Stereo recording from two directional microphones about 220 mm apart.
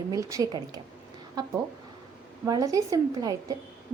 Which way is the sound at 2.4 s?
15° right (ahead or behind).